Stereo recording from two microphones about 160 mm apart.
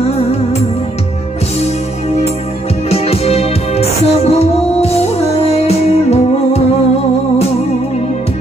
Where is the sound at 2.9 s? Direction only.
40° left (ahead or behind).